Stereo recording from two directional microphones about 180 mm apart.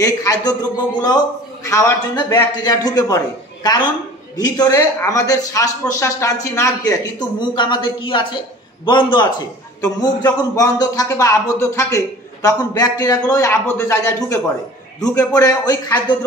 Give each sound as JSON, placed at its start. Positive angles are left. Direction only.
{"t": 0.0, "sound": "a man's voice", "side_deg": 20}